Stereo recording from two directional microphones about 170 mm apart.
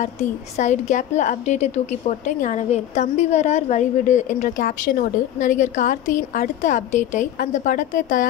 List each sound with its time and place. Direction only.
0.0 s a woman's voice: 45° left (ahead or behind)